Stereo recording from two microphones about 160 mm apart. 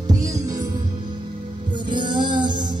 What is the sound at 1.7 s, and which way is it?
Music, 30° right (ahead or behind).